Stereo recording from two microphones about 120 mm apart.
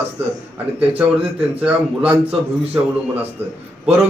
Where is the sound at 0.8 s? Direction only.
10° right (ahead or behind).